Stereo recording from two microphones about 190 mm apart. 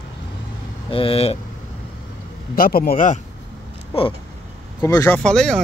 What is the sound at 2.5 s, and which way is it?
Speech, 50° left (ahead or behind).